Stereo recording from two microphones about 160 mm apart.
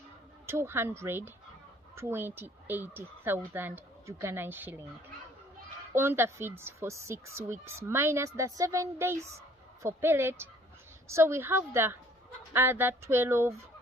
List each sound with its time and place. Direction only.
0.4 s speech: 15° right (ahead or behind)
5.9 s speech: 15° right (ahead or behind)